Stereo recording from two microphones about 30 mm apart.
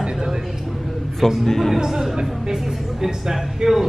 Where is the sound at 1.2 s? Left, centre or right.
Centre.